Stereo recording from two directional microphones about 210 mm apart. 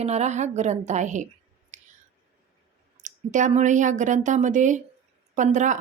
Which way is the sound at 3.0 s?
35° right (ahead or behind).